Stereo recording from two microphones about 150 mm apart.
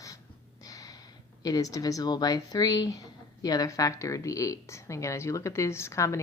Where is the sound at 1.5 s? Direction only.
25° left (ahead or behind).